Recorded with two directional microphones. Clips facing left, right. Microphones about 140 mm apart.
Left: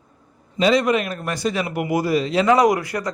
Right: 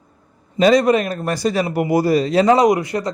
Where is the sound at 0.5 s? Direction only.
40° right (ahead or behind).